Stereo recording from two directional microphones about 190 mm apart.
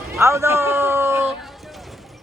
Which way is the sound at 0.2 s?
15° right (ahead or behind).